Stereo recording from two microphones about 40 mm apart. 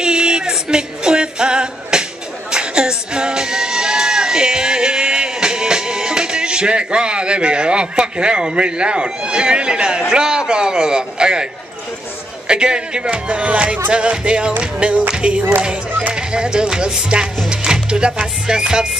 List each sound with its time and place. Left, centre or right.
0.0 s a sound: right
0.5 s music: right
10.1 s speech: centre
12.4 s speech: right
17.5 s music: right